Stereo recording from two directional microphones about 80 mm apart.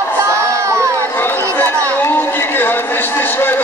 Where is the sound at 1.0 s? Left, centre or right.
Left.